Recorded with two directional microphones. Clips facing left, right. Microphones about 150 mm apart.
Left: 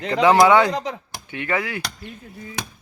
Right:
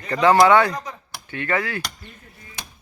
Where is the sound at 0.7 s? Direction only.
70° left (ahead or behind).